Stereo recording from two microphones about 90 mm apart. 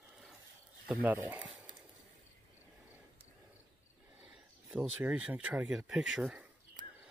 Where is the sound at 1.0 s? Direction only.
20° right (ahead or behind).